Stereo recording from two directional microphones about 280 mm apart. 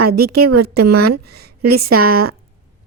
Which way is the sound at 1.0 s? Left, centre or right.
Right.